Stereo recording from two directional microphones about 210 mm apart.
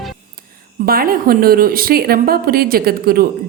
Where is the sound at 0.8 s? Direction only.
45° right (ahead or behind).